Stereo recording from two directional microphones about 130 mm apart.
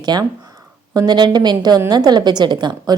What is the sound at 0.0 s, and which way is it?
A woman's voice, 30° right (ahead or behind).